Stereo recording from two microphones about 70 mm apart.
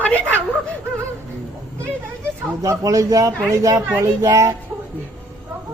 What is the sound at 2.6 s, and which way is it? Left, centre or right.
Speech, right.